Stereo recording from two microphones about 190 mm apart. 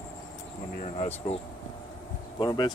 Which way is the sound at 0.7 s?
35° left (ahead or behind).